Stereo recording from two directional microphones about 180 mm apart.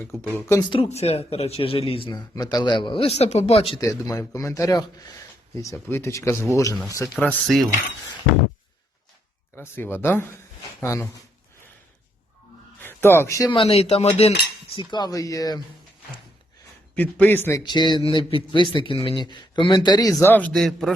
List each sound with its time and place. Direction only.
0.0 s speech: 10° left (ahead or behind)
0.7 s speech: 35° left (ahead or behind)
3.8 s speech: 20° left (ahead or behind)
7.2 s speech: centre (ahead or behind)
9.6 s speech: 10° left (ahead or behind)
12.8 s speech: 15° left (ahead or behind)
13.5 s speech: 30° left (ahead or behind)
14.8 s speech: 25° left (ahead or behind)
16.9 s speech: 10° left (ahead or behind)
17.6 s speech: 25° left (ahead or behind); by 20.9 s centre (ahead or behind)